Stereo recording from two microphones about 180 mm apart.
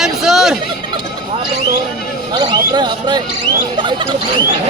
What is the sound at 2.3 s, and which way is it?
Speech, 25° right (ahead or behind).